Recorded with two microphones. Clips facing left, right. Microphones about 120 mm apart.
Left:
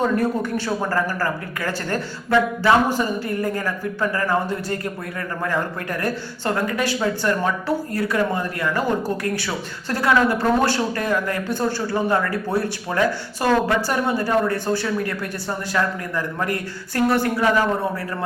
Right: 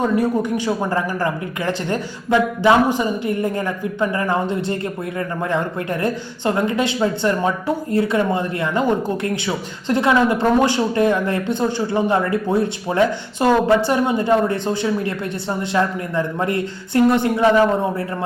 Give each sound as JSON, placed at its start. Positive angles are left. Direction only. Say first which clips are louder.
{"t": 0.0, "sound": "speech", "louder": "right 2 dB", "side_deg": -15}